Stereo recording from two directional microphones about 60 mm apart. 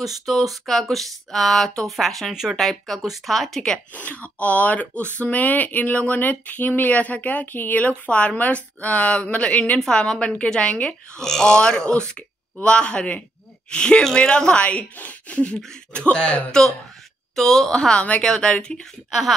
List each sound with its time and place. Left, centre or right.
0.2 s speech: centre
3.9 s speech: left
17.4 s speech: centre